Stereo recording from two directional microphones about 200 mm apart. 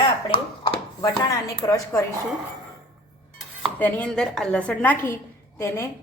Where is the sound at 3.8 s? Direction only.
10° left (ahead or behind).